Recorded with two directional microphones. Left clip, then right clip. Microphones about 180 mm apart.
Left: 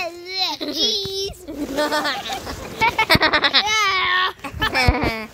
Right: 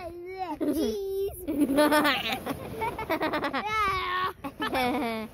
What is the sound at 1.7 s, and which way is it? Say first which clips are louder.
Speech: left 2 dB; 50° right (ahead or behind).